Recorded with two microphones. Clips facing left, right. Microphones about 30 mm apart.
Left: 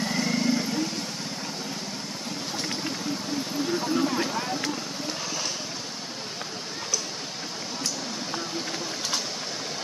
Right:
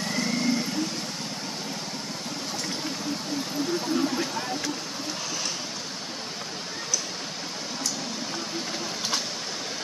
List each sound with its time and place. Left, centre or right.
0.0 s vehicle: centre
4.1 s vehicle: centre